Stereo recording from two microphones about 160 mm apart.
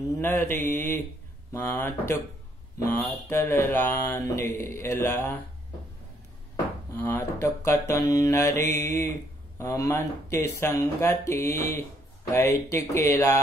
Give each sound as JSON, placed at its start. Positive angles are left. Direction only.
{"t": 0.2, "sound": "mantra", "side_deg": 15}
{"t": 6.9, "sound": "mantra", "side_deg": 15}